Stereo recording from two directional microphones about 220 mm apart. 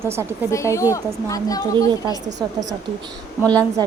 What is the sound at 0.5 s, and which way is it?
Speech, 15° left (ahead or behind).